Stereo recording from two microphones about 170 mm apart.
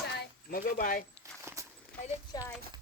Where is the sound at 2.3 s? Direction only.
25° left (ahead or behind).